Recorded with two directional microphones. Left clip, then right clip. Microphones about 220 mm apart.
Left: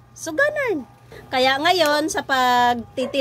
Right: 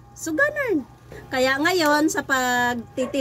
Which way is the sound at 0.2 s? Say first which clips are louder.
Left 2 dB; 5° left (ahead or behind).